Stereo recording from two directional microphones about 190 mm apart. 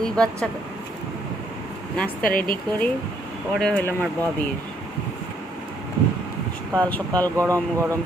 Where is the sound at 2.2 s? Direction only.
50° left (ahead or behind).